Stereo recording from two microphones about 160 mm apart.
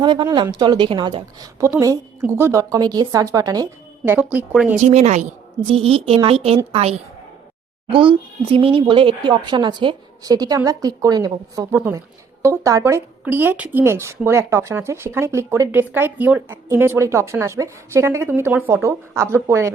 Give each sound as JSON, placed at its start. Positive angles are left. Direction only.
{"t": 0.0, "sound": "speech", "side_deg": -30}
{"t": 4.8, "sound": "a woman's voice", "side_deg": -45}